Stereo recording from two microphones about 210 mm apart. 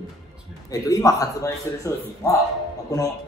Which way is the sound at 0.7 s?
15° left (ahead or behind).